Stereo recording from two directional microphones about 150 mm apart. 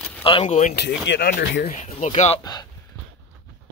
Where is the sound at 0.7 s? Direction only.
90° left.